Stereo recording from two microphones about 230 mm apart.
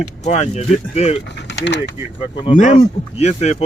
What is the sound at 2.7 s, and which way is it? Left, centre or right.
Speech, left.